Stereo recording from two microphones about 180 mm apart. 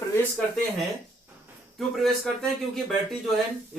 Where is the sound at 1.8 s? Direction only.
Centre (ahead or behind).